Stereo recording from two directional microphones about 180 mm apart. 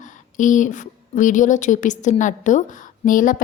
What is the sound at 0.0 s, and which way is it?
Speech, 45° left (ahead or behind).